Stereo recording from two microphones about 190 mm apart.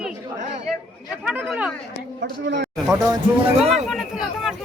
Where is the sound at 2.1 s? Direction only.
70° right (ahead or behind).